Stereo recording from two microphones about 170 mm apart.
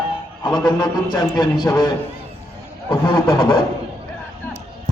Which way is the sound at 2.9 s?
30° left (ahead or behind).